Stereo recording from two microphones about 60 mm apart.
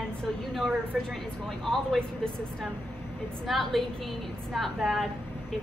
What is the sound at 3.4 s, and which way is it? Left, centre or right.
A woman's voice, centre.